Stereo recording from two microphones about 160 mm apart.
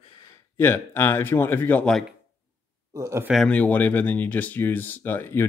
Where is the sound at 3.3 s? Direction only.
5° left (ahead or behind).